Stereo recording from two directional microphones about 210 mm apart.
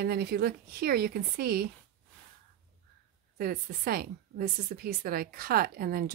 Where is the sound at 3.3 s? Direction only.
45° right (ahead or behind).